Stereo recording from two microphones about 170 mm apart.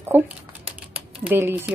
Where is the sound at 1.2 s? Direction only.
10° right (ahead or behind).